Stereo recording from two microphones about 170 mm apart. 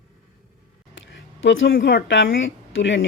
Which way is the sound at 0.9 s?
90° left.